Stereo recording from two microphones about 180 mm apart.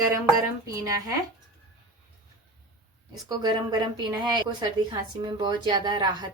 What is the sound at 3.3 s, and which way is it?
A woman's voice, 25° right (ahead or behind).